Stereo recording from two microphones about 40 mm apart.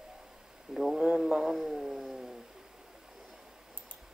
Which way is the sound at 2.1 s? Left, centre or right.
Centre.